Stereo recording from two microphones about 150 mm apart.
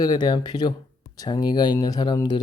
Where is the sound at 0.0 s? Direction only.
25° left (ahead or behind).